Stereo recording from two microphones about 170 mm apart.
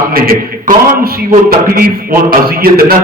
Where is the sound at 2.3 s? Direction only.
60° right (ahead or behind).